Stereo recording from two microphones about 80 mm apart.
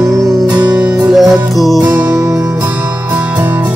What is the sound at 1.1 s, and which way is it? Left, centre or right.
Music, centre.